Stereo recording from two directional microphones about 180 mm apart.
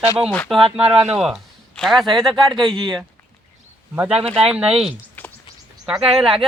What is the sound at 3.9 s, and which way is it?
Speech, 5° right (ahead or behind).